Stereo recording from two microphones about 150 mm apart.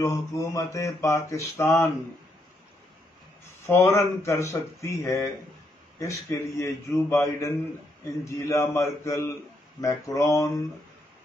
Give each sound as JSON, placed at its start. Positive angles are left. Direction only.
{"t": 0.0, "sound": "a man's voice", "side_deg": 20}
{"t": 3.6, "sound": "a man's voice", "side_deg": 20}